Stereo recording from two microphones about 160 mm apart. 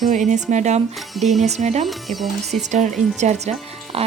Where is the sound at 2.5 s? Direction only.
45° right (ahead or behind).